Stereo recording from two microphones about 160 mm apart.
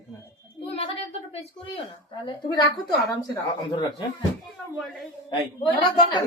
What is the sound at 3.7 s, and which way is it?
Speech, 25° left (ahead or behind).